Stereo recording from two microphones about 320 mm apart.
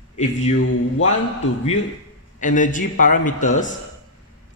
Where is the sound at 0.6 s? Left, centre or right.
Left.